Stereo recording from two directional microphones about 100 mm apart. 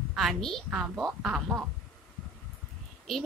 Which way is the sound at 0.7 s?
10° right (ahead or behind).